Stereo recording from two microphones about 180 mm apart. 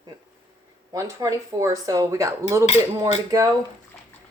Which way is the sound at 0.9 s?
20° right (ahead or behind).